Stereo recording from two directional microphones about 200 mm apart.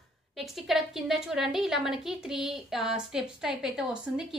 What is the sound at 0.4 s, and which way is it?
A woman's voice, centre (ahead or behind).